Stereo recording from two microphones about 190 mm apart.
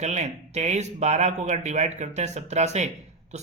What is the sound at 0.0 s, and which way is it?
Speech, 35° right (ahead or behind).